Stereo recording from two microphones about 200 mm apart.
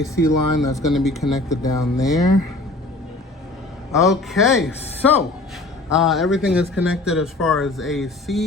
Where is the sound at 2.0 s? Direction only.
15° left (ahead or behind).